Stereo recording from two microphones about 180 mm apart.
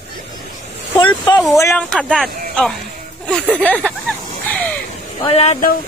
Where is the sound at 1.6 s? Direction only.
10° left (ahead or behind).